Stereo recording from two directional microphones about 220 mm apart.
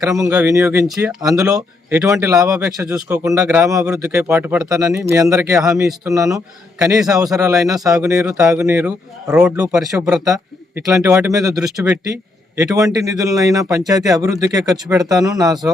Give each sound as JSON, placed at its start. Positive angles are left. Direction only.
{"t": 0.0, "sound": "speech", "side_deg": -15}
{"t": 1.5, "sound": "speech", "side_deg": -5}
{"t": 10.2, "sound": "speech", "side_deg": -15}